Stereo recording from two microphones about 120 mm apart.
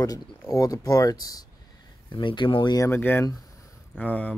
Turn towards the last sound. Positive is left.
turn(degrees=10)  # may be behind; listen again after turning